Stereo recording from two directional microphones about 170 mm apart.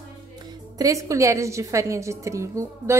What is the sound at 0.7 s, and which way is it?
A woman's voice, 20° right (ahead or behind).